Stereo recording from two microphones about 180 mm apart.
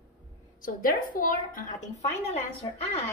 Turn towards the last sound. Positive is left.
turn(degrees=35)  # may be behind; listen again after turning